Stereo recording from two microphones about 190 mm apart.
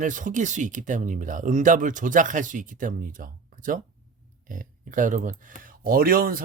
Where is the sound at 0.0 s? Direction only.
45° right (ahead or behind).